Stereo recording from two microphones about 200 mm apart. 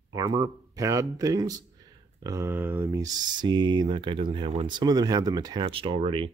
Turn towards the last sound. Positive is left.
turn(degrees=-25)  # may be behind; listen again after turning